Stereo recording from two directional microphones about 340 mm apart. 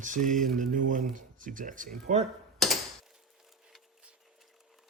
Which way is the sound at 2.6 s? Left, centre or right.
Centre.